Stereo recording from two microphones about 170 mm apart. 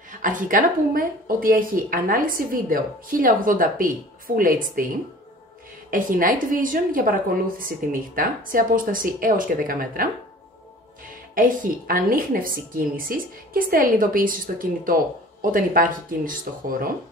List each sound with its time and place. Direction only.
0.1 s a woman's voice: 50° right (ahead or behind)
11.3 s a woman's voice: 55° right (ahead or behind)